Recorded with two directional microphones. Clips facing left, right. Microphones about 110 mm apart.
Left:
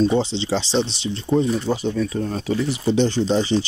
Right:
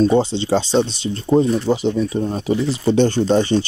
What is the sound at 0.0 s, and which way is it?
Speech, 50° right (ahead or behind).